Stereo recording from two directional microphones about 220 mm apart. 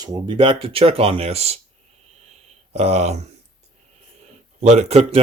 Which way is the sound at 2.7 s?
30° right (ahead or behind).